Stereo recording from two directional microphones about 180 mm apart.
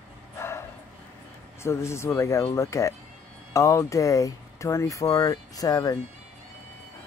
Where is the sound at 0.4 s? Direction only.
15° left (ahead or behind).